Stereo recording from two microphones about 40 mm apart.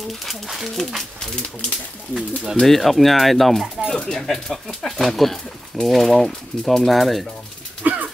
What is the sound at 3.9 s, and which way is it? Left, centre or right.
Speech, centre.